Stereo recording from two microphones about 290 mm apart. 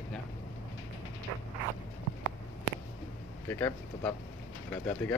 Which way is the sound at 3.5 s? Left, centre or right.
Centre.